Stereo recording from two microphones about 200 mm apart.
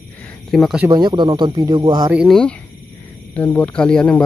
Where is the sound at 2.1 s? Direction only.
Centre (ahead or behind).